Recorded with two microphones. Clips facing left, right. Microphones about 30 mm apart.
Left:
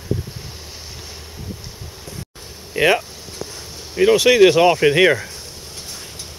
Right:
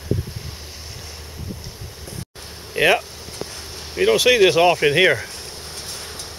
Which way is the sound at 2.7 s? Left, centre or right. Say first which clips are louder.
Left 1 dB; centre.